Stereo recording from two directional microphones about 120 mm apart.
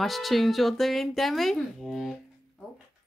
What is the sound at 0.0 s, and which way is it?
A woman's voice, centre (ahead or behind).